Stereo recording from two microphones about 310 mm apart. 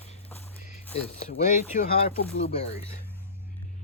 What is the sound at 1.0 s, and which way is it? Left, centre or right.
Speech, centre.